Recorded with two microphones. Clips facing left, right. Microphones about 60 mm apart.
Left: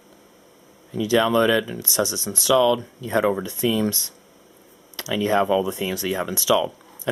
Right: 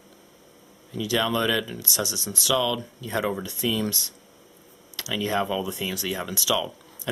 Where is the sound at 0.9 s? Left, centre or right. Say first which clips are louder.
Left 6 dB; left.